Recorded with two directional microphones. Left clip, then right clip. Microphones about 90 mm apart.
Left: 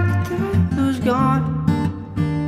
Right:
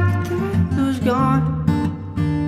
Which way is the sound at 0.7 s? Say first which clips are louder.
Even; 40° left (ahead or behind).